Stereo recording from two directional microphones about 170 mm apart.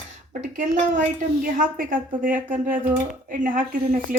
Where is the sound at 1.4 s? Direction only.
55° right (ahead or behind).